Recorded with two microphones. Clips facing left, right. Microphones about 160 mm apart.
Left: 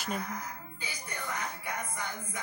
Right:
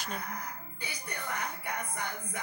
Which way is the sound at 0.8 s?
60° right (ahead or behind).